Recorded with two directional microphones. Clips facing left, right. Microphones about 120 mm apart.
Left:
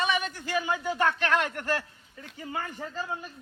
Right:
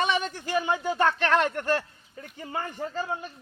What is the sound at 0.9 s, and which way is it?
Speech, 30° right (ahead or behind).